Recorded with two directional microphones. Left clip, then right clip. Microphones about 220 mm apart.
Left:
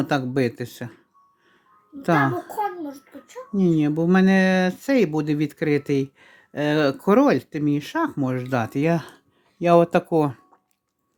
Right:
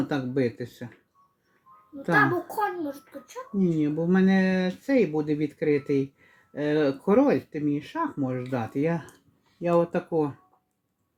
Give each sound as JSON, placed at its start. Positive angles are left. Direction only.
{"t": 0.0, "sound": "speech", "side_deg": 35}
{"t": 2.0, "sound": "speech", "side_deg": 35}
{"t": 2.6, "sound": "a child's voice", "side_deg": 10}
{"t": 3.5, "sound": "speech", "side_deg": 35}